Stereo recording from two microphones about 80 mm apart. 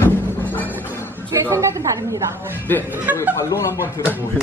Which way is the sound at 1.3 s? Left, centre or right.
Right.